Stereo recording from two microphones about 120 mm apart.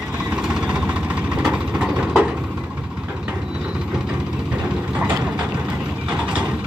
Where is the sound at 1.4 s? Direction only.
5° right (ahead or behind).